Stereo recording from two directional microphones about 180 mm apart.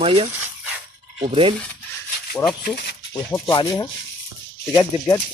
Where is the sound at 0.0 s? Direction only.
30° right (ahead or behind).